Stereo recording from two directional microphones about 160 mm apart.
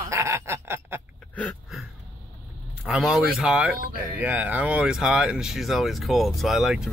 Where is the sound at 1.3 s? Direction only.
10° left (ahead or behind).